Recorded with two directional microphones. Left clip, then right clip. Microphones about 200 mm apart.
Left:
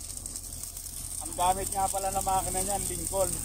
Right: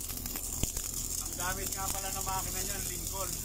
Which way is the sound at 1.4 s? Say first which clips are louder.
Left 11 dB; 15° left (ahead or behind).